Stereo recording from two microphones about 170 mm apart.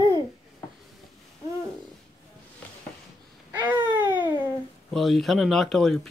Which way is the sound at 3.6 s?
10° right (ahead or behind).